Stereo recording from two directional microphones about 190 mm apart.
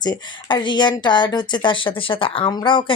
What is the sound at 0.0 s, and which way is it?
Speech, 25° left (ahead or behind).